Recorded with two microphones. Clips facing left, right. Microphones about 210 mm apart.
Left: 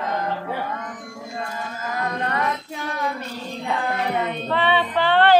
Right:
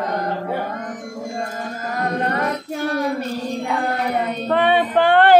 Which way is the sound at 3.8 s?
40° right (ahead or behind).